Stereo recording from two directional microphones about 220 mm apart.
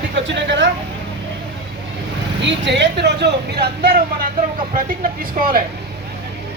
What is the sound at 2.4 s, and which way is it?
Speech, 55° right (ahead or behind).